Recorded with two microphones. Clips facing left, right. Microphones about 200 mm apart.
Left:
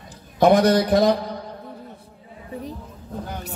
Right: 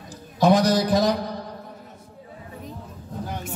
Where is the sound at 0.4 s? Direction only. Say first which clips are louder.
Left 3 dB; 60° left (ahead or behind).